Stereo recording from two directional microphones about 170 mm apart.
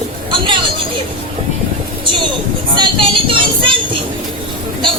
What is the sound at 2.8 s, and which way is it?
Speech, 30° right (ahead or behind).